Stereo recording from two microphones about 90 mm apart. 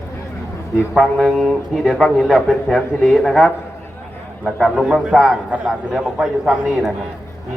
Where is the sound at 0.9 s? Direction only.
Centre (ahead or behind).